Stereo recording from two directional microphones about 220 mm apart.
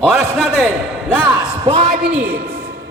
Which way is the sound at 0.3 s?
Centre (ahead or behind).